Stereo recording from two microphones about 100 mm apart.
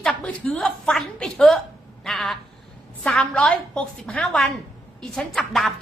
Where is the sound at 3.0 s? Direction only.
5° left (ahead or behind).